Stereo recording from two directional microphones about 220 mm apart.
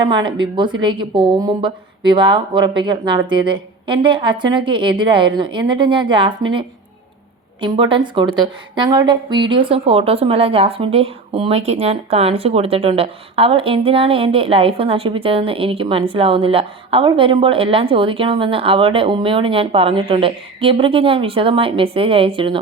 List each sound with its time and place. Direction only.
0.1 s a woman's voice: 20° right (ahead or behind)
7.6 s a woman's voice: 20° right (ahead or behind)